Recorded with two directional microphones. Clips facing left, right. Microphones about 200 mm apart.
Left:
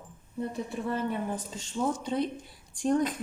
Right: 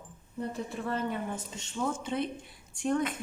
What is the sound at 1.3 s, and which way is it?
Speech, 35° left (ahead or behind).